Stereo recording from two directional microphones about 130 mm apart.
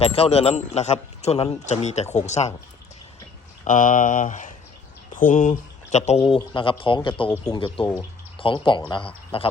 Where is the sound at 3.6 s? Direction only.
90° left; by 6.4 s 50° left (ahead or behind).